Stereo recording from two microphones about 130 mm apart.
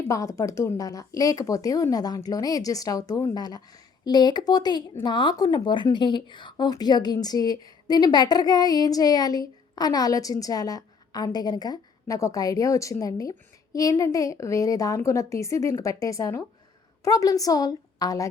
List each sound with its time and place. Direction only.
0.1 s a woman's voice: 25° left (ahead or behind)